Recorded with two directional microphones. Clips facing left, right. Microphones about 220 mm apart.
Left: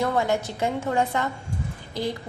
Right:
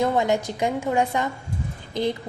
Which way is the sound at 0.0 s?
20° right (ahead or behind).